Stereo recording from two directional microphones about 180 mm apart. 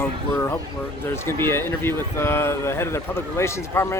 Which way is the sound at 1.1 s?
15° left (ahead or behind).